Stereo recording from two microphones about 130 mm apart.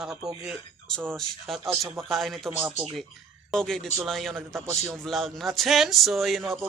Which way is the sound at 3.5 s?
5° left (ahead or behind).